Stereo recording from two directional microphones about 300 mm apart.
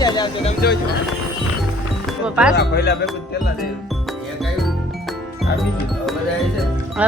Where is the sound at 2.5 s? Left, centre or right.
Left.